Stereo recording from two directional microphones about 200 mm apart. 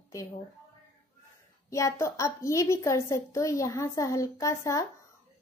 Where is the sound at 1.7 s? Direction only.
15° left (ahead or behind).